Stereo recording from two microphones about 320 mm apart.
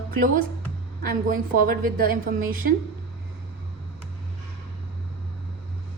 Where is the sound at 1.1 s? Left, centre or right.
Right.